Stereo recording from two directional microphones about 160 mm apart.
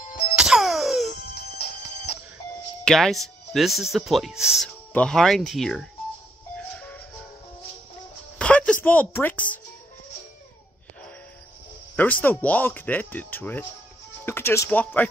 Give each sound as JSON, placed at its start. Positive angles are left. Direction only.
{"t": 0.4, "sound": "music", "side_deg": 0}
{"t": 1.3, "sound": "music", "side_deg": 75}
{"t": 2.8, "sound": "speech", "side_deg": 5}
{"t": 8.4, "sound": "music", "side_deg": 5}
{"t": 9.1, "sound": "speech", "side_deg": 10}
{"t": 12.0, "sound": "speech", "side_deg": 10}